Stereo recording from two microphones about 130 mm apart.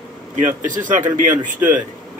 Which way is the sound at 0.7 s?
80° right.